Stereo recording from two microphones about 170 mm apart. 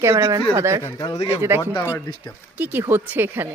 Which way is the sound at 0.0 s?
15° right (ahead or behind).